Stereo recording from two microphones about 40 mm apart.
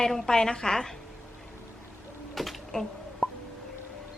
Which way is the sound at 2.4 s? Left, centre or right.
Centre.